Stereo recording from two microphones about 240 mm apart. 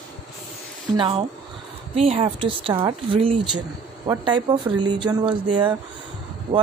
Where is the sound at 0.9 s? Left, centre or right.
Centre.